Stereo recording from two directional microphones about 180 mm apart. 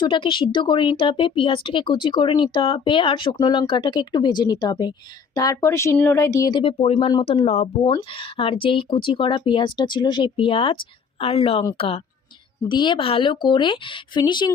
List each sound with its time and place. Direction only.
0.0 s speech: 25° left (ahead or behind)
7.9 s a woman's voice: 25° left (ahead or behind)
12.6 s speech: 25° left (ahead or behind)